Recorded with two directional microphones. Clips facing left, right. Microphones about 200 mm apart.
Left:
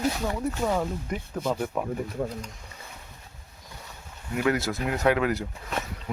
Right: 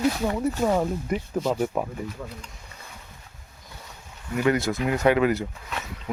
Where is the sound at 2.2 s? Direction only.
45° left (ahead or behind).